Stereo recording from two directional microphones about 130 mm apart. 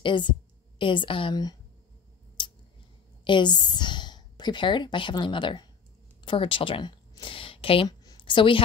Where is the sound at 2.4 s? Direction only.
40° left (ahead or behind).